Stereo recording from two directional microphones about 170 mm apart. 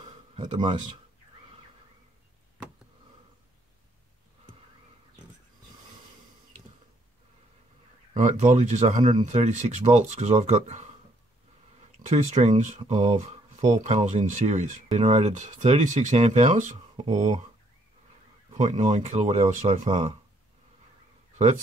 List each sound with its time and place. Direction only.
0.4 s speech: 25° right (ahead or behind)
8.1 s speech: 45° right (ahead or behind)
12.1 s speech: 45° right (ahead or behind)
18.5 s speech: 45° right (ahead or behind)